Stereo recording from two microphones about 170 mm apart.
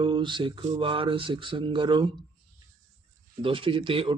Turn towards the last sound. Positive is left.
turn(degrees=-30)  # may be behind; listen again after turning